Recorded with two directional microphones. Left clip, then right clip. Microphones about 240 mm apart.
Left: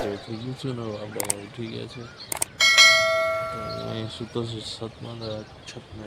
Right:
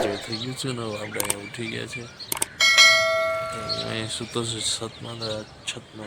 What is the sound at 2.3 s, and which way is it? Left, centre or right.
Bell, centre.